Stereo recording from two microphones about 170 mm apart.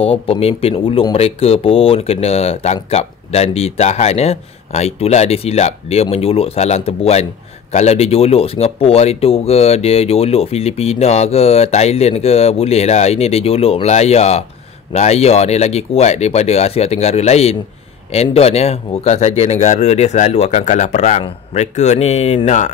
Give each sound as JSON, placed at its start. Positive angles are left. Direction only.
{"t": 0.0, "sound": "speech", "side_deg": 35}